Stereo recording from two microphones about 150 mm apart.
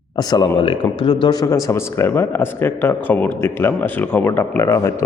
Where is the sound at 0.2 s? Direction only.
25° left (ahead or behind).